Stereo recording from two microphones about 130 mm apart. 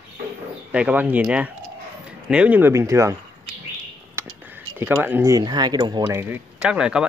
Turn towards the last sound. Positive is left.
turn(degrees=-5)  # may be behind; listen again after turning